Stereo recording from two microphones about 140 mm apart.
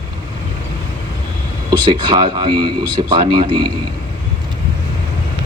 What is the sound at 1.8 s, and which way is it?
Speech, 35° right (ahead or behind).